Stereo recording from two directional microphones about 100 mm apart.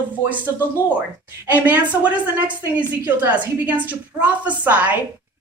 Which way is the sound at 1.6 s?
15° right (ahead or behind).